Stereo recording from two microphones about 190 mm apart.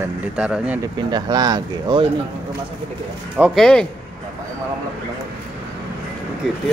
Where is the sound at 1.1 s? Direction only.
20° right (ahead or behind).